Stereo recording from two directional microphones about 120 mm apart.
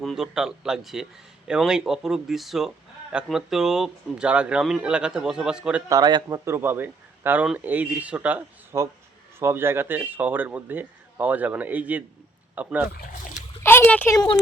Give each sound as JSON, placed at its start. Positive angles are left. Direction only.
{"t": 0.0, "sound": "speech", "side_deg": 0}
{"t": 5.9, "sound": "a man's voice", "side_deg": -35}
{"t": 13.6, "sound": "a sound", "side_deg": 20}